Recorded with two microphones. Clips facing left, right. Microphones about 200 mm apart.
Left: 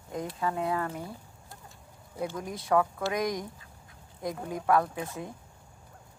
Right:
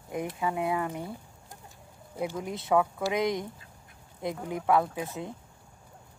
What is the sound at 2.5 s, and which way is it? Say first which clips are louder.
Speech: even; 25° right (ahead or behind).